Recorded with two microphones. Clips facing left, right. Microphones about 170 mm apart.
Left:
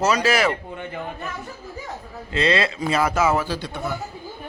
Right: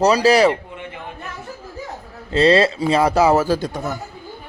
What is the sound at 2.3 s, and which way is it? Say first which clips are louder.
A man's voice: right 7 dB; 35° right (ahead or behind).